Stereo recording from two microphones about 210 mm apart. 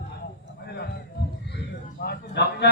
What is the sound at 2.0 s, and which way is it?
Speech, 50° left (ahead or behind).